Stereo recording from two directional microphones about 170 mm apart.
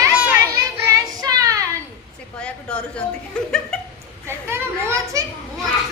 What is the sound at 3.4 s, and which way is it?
Chuckle, 5° left (ahead or behind).